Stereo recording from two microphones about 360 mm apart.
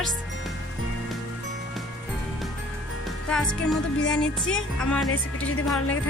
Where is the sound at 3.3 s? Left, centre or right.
Centre.